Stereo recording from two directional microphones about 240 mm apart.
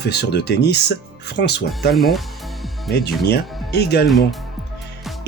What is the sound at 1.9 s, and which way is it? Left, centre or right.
Speech, centre.